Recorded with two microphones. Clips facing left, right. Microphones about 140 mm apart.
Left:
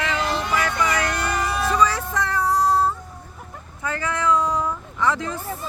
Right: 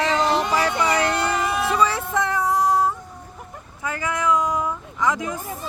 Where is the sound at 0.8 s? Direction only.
30° right (ahead or behind).